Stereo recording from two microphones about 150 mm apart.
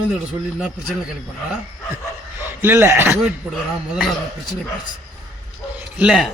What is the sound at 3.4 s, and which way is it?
Speech, 5° right (ahead or behind).